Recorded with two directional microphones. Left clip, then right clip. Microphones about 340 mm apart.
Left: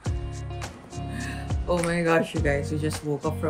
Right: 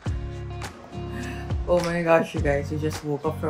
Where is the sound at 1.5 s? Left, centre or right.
Centre.